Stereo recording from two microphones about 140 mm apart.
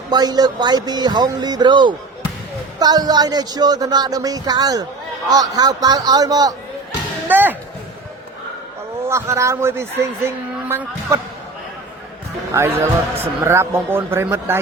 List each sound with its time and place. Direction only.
0.1 s speech: 30° right (ahead or behind)
7.3 s speech: 15° right (ahead or behind)
9.0 s speech: 20° right (ahead or behind)
12.5 s speech: 20° right (ahead or behind)